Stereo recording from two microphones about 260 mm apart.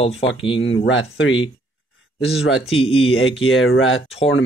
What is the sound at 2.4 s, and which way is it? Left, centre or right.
Speech, left.